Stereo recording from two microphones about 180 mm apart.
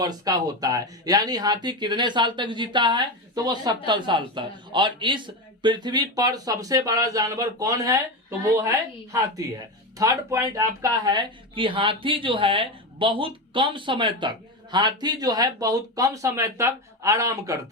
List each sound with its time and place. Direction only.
0.0 s speech: 20° right (ahead or behind)
10.0 s speech: 15° right (ahead or behind)